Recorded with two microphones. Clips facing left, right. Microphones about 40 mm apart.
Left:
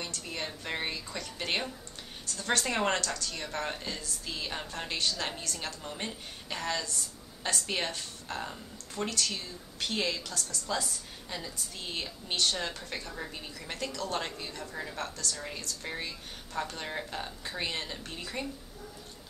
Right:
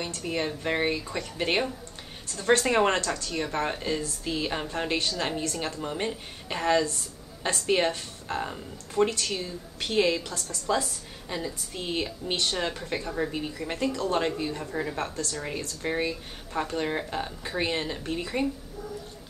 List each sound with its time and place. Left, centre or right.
0.0 s a woman's voice: right
10.7 s a woman's voice: centre